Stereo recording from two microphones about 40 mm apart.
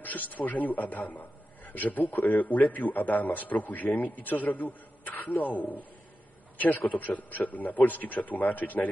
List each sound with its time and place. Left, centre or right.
0.0 s a man's voice: left